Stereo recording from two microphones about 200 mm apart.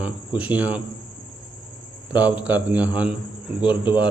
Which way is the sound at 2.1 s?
5° right (ahead or behind).